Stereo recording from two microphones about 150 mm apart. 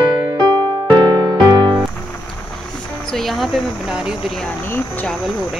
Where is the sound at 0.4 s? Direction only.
30° right (ahead or behind).